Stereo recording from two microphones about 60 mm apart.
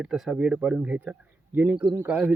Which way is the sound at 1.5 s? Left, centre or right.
Right.